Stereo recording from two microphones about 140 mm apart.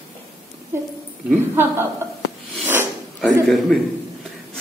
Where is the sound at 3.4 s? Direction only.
Centre (ahead or behind).